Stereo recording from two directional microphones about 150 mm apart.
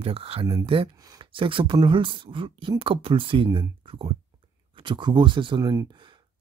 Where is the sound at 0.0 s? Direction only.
40° right (ahead or behind).